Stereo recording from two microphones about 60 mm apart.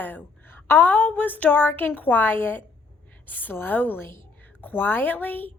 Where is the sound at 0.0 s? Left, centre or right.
Left.